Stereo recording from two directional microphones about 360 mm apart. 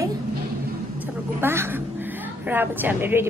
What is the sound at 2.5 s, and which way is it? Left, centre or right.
Speech, centre.